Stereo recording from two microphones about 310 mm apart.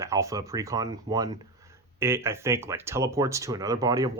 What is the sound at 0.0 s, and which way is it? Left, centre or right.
Speech, centre.